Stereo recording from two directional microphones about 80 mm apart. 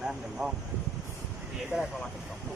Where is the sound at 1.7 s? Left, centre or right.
Centre.